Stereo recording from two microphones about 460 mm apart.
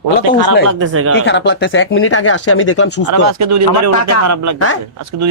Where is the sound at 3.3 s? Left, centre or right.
Right.